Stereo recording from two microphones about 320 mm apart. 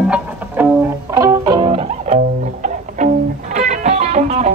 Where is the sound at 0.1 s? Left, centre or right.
Centre.